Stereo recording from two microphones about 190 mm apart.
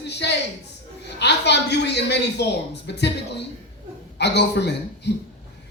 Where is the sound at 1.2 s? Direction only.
65° left (ahead or behind).